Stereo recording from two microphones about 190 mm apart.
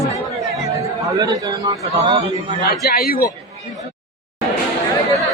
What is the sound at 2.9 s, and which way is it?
Speech, 50° left (ahead or behind).